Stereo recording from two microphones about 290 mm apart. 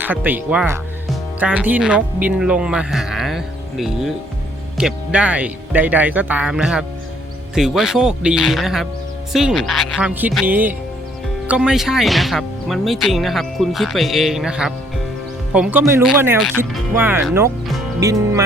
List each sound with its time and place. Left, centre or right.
0.0 s speech: centre